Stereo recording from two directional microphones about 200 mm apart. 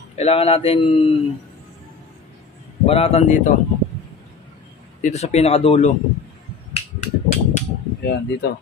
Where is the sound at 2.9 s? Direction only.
30° left (ahead or behind).